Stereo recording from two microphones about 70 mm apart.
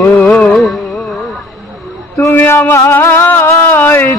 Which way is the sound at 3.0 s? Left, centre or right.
Left.